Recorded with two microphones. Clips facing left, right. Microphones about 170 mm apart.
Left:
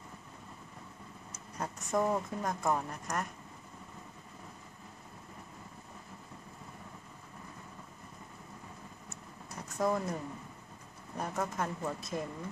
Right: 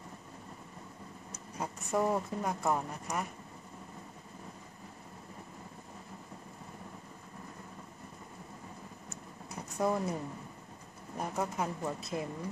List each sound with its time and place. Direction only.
1.6 s speech: 10° right (ahead or behind)
9.8 s speech: 10° right (ahead or behind)
11.1 s speech: 10° right (ahead or behind)